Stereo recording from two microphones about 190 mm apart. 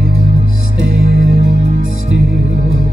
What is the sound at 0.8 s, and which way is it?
Music, 90° right.